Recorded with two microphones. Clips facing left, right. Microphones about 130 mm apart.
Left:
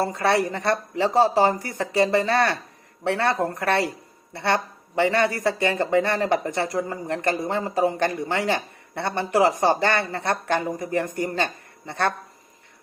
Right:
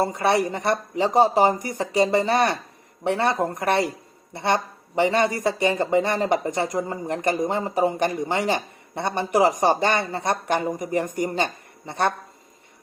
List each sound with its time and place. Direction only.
0.0 s speech: 15° right (ahead or behind)